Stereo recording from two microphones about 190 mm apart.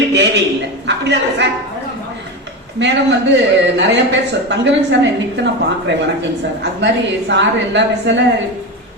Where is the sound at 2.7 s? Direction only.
70° right (ahead or behind).